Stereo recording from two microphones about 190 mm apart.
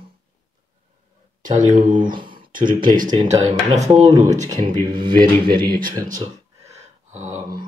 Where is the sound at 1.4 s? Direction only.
40° right (ahead or behind).